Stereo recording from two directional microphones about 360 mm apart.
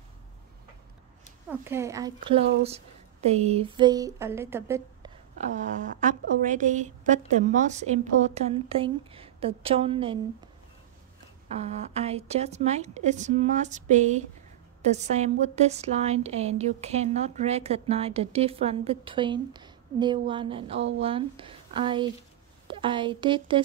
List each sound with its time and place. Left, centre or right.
1.5 s speech: centre
5.4 s a woman's voice: centre
11.5 s a woman's voice: centre